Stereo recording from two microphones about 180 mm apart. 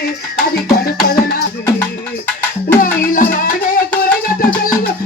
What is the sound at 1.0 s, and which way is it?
Music, 55° left (ahead or behind).